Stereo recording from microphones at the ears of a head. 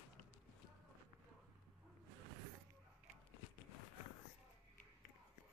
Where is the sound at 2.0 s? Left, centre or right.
Right.